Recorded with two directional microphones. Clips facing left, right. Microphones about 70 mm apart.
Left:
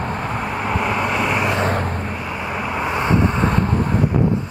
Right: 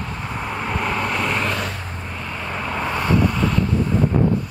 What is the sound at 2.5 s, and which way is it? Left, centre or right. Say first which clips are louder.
Vehicle: left 1 dB; centre.